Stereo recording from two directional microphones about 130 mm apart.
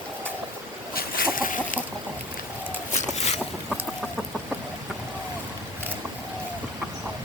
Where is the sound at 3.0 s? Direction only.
60° left (ahead or behind).